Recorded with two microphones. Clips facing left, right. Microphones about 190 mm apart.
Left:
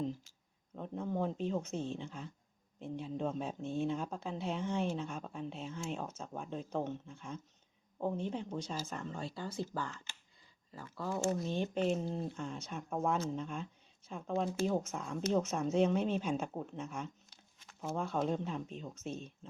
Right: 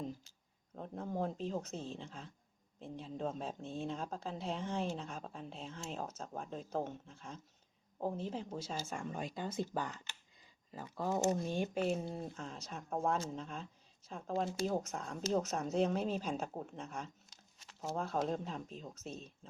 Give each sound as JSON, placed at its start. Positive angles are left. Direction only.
{"t": 0.8, "sound": "speech", "side_deg": 0}